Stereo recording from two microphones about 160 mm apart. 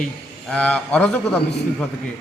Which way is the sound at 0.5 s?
10° left (ahead or behind).